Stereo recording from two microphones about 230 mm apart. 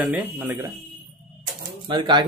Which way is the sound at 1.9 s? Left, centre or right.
Right.